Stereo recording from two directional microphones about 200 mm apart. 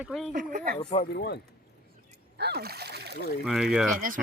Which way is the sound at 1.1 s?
50° left (ahead or behind).